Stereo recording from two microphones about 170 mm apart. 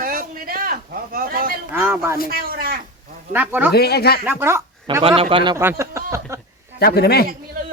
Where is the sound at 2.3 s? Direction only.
60° right (ahead or behind).